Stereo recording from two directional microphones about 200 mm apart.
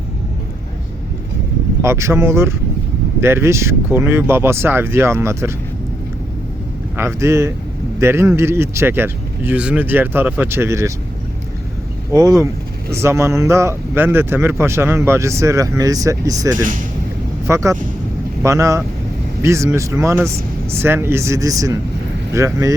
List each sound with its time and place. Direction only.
1.8 s speech: 15° right (ahead or behind)
6.9 s speech: 15° right (ahead or behind)
12.1 s speech: 15° right (ahead or behind)